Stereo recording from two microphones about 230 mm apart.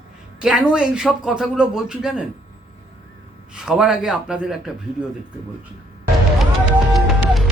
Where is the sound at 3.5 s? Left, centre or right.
Centre.